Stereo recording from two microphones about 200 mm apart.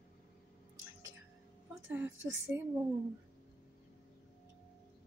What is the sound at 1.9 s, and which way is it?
Speech, 10° right (ahead or behind).